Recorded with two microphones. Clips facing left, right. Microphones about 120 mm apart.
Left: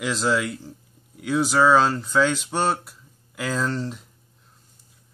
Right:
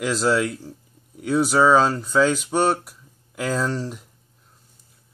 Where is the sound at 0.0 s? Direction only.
5° right (ahead or behind).